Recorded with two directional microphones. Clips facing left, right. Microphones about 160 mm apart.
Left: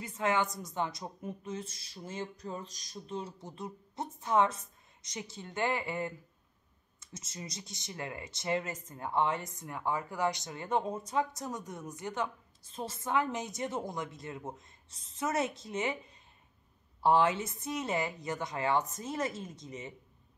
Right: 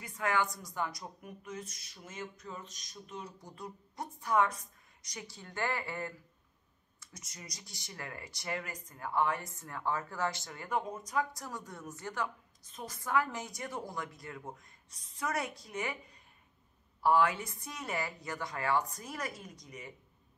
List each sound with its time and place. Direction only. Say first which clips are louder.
0.0 s speech: left 2 dB; 25° left (ahead or behind)